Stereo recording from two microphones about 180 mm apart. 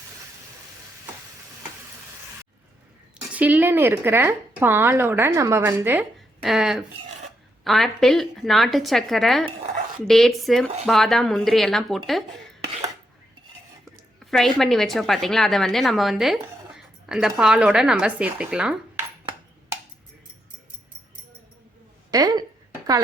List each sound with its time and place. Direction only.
3.3 s a woman's voice: 10° right (ahead or behind)
14.3 s a woman's voice: centre (ahead or behind)
22.1 s speech: 20° right (ahead or behind)